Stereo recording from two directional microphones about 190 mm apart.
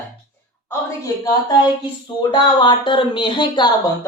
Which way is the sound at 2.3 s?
25° left (ahead or behind).